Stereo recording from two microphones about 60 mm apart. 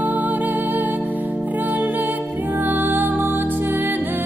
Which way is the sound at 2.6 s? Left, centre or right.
Right.